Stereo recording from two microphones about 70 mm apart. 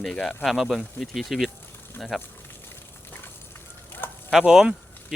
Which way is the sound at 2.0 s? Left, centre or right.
Left.